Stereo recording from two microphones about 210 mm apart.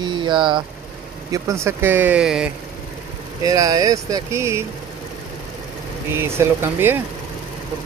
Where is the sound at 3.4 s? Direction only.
15° right (ahead or behind).